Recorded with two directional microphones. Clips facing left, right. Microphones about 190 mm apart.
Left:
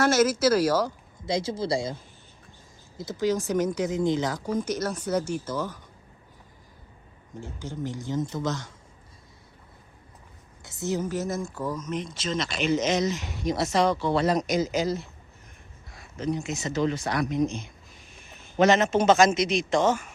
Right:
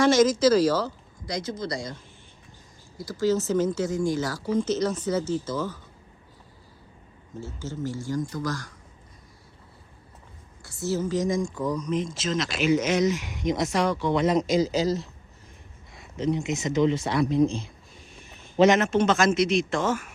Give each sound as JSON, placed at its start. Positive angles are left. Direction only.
{"t": 0.0, "sound": "speech", "side_deg": 10}
{"t": 1.2, "sound": "speech", "side_deg": 25}
{"t": 3.0, "sound": "speech", "side_deg": 20}
{"t": 7.3, "sound": "speech", "side_deg": 15}
{"t": 10.6, "sound": "speech", "side_deg": 20}
{"t": 15.9, "sound": "speech", "side_deg": -25}
{"t": 18.8, "sound": "speech", "side_deg": 0}